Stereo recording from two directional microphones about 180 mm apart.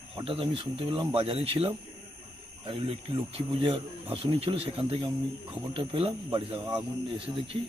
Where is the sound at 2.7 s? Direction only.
30° right (ahead or behind).